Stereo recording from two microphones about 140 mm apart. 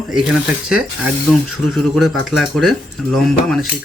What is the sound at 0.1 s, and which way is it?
Speech, 5° right (ahead or behind).